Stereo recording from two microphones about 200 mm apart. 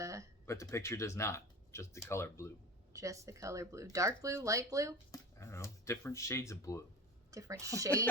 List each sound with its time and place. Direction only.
0.0 s a sound: 15° right (ahead or behind)
0.4 s speech: 15° left (ahead or behind)
2.9 s speech: 15° right (ahead or behind)
5.1 s speech: 15° left (ahead or behind)
7.3 s a woman's voice: 15° right (ahead or behind)